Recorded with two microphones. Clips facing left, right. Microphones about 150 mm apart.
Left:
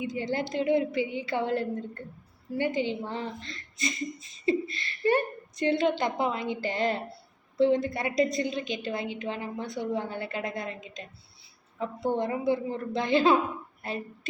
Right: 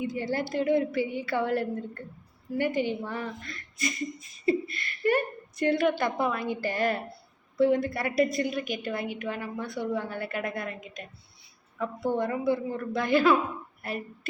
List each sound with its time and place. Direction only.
0.0 s a woman's voice: 20° left (ahead or behind)